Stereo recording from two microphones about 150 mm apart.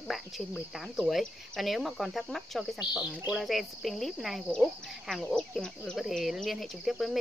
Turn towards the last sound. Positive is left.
turn(degrees=0)  # may be behind; listen again after turning